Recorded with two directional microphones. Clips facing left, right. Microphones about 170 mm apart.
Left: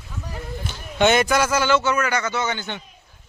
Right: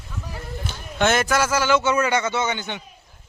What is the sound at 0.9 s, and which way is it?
Speech, centre (ahead or behind).